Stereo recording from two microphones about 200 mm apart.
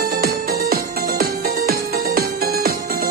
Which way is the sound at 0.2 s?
50° right (ahead or behind).